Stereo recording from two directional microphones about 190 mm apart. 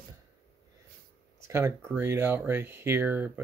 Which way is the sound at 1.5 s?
15° right (ahead or behind).